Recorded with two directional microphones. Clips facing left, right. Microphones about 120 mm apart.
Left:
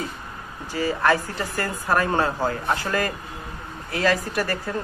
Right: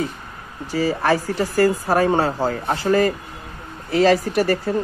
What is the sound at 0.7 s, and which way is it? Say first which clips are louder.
Speech: right 2 dB; 35° right (ahead or behind).